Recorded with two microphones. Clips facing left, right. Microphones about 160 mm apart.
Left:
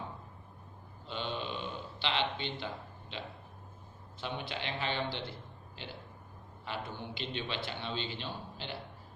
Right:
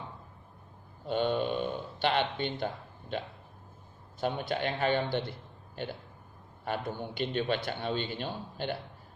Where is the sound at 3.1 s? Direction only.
50° right (ahead or behind).